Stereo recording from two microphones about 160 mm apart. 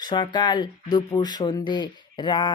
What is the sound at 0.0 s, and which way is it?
Speech, 30° left (ahead or behind).